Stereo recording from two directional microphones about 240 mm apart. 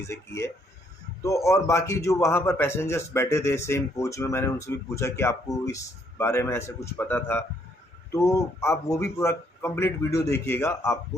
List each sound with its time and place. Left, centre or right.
0.0 s a man's voice: centre